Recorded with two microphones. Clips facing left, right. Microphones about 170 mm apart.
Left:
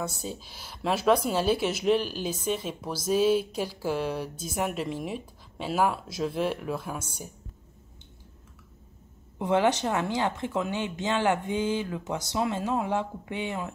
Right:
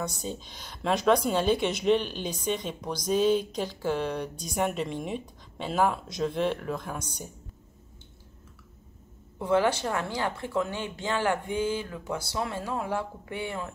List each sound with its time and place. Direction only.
0.0 s speech: 5° left (ahead or behind)
9.4 s speech: 20° left (ahead or behind)